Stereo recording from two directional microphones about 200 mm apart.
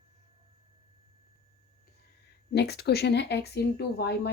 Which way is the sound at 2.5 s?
55° left (ahead or behind).